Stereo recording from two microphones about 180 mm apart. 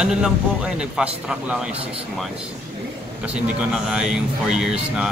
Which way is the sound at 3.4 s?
5° right (ahead or behind).